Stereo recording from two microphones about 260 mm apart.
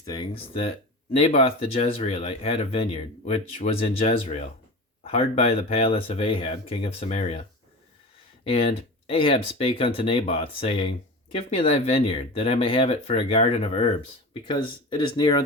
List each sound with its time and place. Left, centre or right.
0.0 s speech: centre
9.0 s speech: left